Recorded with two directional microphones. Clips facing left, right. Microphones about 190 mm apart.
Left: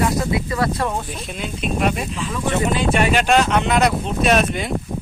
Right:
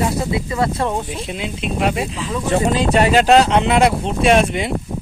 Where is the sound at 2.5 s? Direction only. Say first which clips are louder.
Right 4 dB; 35° right (ahead or behind).